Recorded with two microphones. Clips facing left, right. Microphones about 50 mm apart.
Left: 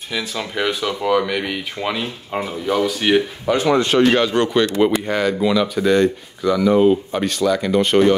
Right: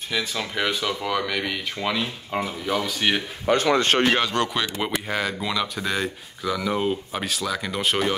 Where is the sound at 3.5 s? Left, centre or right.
Right.